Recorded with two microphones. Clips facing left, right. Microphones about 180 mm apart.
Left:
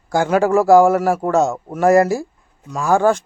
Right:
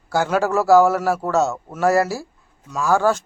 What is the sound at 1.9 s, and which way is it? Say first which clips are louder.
Speech: left 5 dB; 50° left (ahead or behind).